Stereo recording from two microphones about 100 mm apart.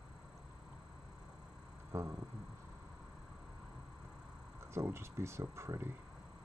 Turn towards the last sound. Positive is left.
turn(degrees=-25)  # may be behind; listen again after turning